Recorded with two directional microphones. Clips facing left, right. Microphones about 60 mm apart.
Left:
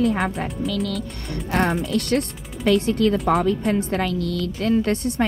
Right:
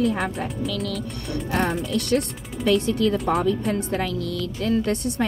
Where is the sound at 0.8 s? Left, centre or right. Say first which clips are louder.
Left 1 dB; left.